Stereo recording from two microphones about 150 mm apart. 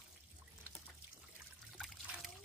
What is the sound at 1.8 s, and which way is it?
Trickle, centre (ahead or behind).